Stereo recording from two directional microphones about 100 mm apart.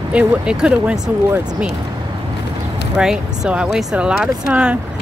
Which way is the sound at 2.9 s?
5° right (ahead or behind).